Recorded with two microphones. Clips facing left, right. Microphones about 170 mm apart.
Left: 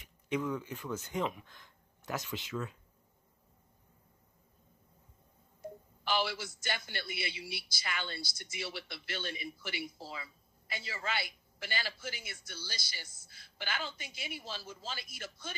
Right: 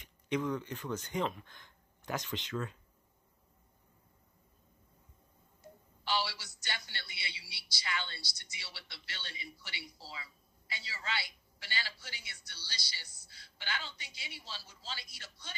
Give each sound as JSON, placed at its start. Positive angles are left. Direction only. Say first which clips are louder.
{"t": 0.0, "sound": "speech", "louder": "even", "side_deg": 5}
{"t": 6.0, "sound": "a man's voice", "louder": "left 2 dB", "side_deg": 50}